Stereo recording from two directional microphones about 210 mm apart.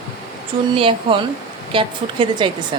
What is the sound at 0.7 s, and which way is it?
A woman's voice, 25° right (ahead or behind).